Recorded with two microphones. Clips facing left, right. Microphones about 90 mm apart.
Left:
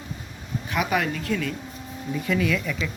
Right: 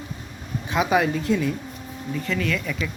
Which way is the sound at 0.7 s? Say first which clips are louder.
Right 4 dB; 20° right (ahead or behind).